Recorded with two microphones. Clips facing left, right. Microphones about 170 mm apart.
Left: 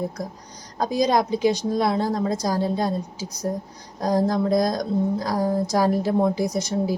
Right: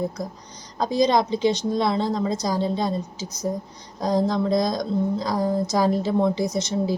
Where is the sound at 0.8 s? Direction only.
10° left (ahead or behind).